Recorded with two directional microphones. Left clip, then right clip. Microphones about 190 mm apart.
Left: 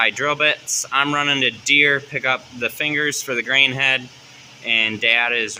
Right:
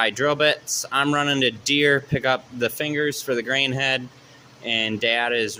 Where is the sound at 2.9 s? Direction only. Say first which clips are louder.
Left 2 dB; 15° right (ahead or behind).